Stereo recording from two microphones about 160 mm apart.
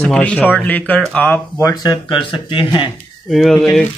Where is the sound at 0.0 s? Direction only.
5° left (ahead or behind).